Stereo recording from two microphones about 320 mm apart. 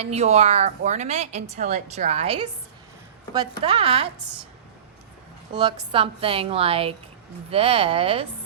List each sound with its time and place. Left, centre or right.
0.0 s a woman's voice: right
3.6 s a woman's voice: centre
5.5 s a woman's voice: centre